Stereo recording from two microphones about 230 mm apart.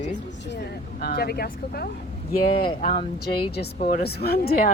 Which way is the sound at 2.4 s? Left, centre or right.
Left.